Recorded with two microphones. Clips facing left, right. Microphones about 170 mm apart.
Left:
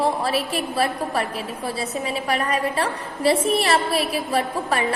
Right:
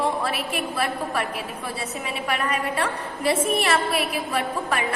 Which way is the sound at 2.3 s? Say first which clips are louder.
Left 2 dB; 35° left (ahead or behind).